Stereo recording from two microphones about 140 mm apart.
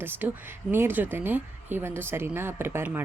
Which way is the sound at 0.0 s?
15° right (ahead or behind).